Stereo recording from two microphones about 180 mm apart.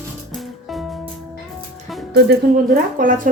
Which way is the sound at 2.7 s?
50° right (ahead or behind).